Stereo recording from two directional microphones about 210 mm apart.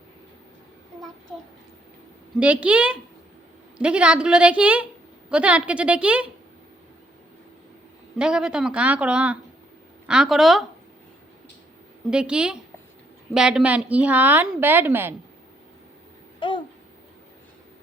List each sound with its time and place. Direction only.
2.4 s speech: 5° right (ahead or behind)
8.2 s speech: 5° right (ahead or behind)
12.1 s a woman's voice: 5° right (ahead or behind)
16.4 s babbling: 25° left (ahead or behind)